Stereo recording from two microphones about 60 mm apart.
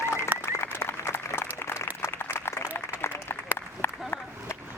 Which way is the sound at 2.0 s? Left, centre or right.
Left.